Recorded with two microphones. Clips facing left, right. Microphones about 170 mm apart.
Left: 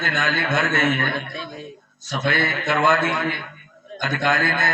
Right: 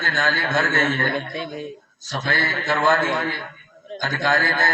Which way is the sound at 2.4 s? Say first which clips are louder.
Even; 25° left (ahead or behind).